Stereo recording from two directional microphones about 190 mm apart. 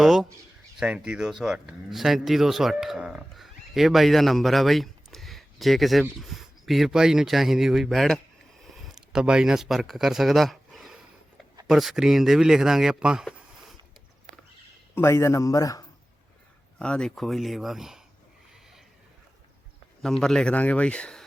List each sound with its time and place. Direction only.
0.0 s speech: 5° right (ahead or behind)
14.9 s a man's voice: 15° left (ahead or behind)
16.7 s speech: 5° left (ahead or behind)
20.0 s speech: centre (ahead or behind)